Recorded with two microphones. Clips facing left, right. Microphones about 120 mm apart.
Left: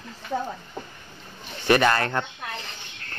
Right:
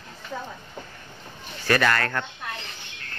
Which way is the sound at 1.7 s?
20° left (ahead or behind).